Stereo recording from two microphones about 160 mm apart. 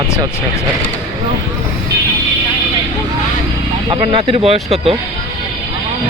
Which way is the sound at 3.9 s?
30° right (ahead or behind).